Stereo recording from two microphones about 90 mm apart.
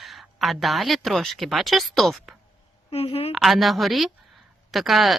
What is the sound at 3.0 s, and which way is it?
Speech, 90° left.